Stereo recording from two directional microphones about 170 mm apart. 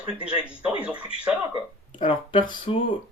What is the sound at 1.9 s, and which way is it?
Speech, 30° left (ahead or behind).